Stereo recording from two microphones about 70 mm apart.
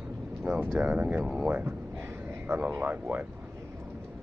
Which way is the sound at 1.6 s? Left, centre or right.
Right.